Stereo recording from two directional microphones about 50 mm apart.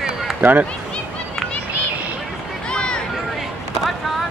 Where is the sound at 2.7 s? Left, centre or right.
Centre.